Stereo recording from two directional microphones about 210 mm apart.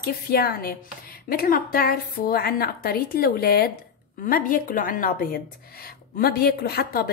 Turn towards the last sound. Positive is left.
turn(degrees=45)  # may be behind; listen again after turning